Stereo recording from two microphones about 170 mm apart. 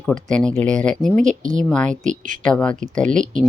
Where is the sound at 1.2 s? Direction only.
45° right (ahead or behind).